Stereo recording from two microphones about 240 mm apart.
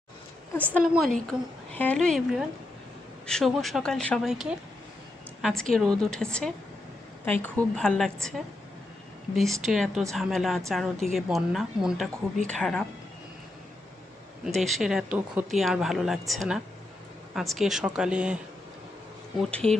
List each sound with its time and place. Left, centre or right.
0.5 s a woman's voice: centre
14.4 s a woman's voice: centre
19.4 s a woman's voice: centre